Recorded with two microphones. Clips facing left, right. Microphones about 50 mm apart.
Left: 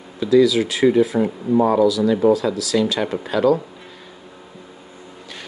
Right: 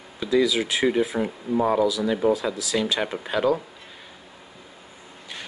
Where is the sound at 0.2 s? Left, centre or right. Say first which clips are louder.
Left 7 dB; centre.